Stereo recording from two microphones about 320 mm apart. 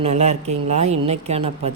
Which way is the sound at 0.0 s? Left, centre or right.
Right.